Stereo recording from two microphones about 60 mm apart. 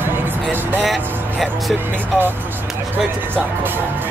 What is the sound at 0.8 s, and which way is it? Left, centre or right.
Vehicle, centre.